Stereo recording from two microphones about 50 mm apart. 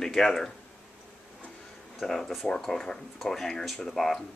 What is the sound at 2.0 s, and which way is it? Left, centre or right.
Speech, centre.